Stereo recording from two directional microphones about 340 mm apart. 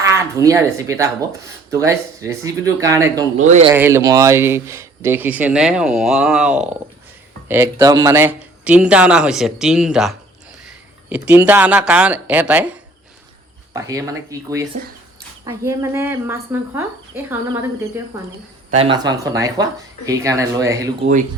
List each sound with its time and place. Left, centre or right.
0.0 s speech: centre
3.3 s speech: centre
3.8 s speech: centre
18.8 s speech: centre